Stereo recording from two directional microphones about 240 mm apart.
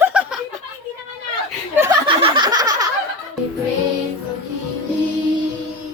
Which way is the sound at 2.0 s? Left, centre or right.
Right.